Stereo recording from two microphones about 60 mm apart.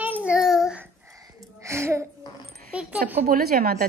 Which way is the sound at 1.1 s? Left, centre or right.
Right.